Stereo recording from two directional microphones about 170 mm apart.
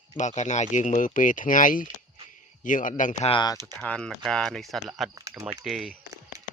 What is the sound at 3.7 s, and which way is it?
Speech, 5° left (ahead or behind).